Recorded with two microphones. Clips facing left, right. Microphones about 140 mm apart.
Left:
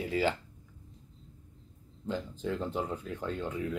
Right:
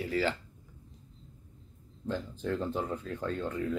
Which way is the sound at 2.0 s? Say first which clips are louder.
Right 1 dB; 15° left (ahead or behind).